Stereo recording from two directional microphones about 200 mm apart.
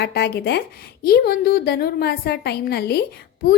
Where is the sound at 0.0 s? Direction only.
55° left (ahead or behind).